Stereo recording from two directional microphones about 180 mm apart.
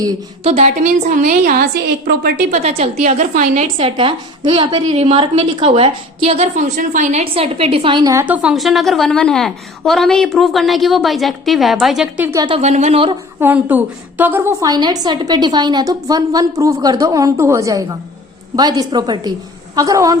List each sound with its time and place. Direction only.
0.4 s a woman's voice: 35° right (ahead or behind)
2.0 s a woman's voice: 70° right (ahead or behind)
2.5 s a woman's voice: 35° right (ahead or behind); by 12.4 s 10° right (ahead or behind)
12.4 s a woman's voice: 25° right (ahead or behind)
12.6 s a woman's voice: 40° right (ahead or behind)
13.4 s a woman's voice: 10° right (ahead or behind)